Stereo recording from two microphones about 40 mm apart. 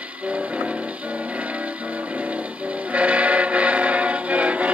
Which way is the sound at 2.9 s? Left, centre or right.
Right.